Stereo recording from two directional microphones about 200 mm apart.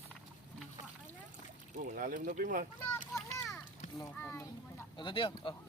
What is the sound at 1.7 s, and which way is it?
Speech, 45° right (ahead or behind).